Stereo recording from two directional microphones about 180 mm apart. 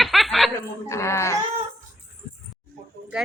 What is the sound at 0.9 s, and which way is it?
Speech, 15° left (ahead or behind).